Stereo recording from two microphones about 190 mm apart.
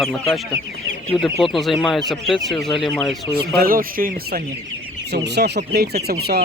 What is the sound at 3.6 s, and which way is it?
Speech, 50° right (ahead or behind).